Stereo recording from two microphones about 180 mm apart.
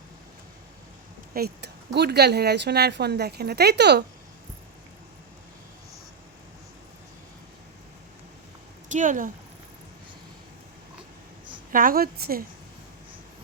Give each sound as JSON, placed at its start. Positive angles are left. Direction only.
{"t": 1.3, "sound": "speech", "side_deg": -60}
{"t": 8.9, "sound": "speech", "side_deg": -45}
{"t": 11.7, "sound": "a woman's voice", "side_deg": -50}